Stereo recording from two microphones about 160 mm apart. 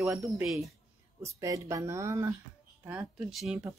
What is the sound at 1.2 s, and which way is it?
Speech, 20° right (ahead or behind).